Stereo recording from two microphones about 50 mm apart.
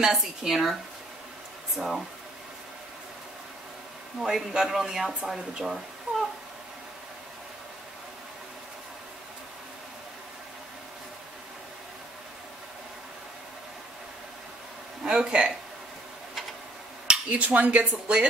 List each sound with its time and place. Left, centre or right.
0.0 s speech: centre
1.8 s speech: centre
4.2 s speech: centre
6.1 s a sound: right
15.0 s speech: centre
17.3 s speech: right